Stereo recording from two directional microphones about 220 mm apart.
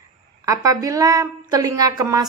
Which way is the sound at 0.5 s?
15° right (ahead or behind).